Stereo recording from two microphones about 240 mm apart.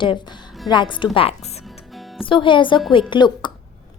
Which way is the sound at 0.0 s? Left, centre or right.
Centre.